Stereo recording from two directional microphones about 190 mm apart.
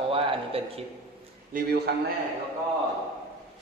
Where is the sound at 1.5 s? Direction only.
55° right (ahead or behind).